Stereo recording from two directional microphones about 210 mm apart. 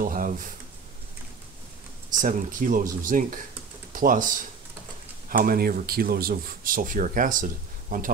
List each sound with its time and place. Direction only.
0.0 s speech: 40° right (ahead or behind)
2.0 s speech: 40° right (ahead or behind)